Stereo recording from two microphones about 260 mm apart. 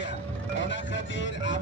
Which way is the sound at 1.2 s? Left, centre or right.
Left.